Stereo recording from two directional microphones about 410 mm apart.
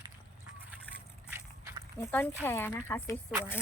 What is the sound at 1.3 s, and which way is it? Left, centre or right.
Walk, centre.